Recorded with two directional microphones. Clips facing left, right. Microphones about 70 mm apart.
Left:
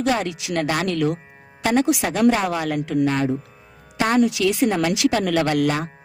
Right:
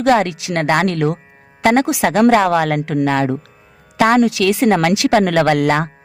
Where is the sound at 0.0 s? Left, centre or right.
Right.